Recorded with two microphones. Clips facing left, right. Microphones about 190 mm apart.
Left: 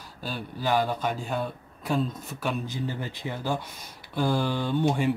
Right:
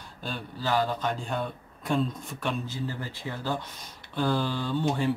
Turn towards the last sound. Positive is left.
turn(degrees=15)  # may be behind; listen again after turning